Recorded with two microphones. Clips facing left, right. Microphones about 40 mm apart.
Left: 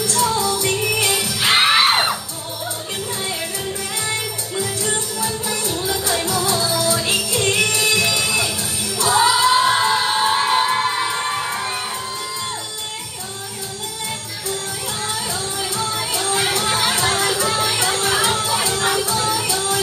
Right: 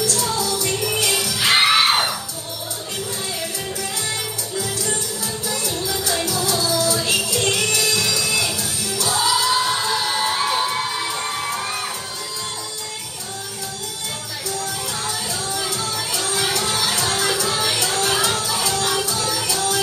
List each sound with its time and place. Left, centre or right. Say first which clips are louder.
0.0 s music: left 3 dB; left
4.6 s music: left 2 dB; left
15.7 s music: left 2 dB; left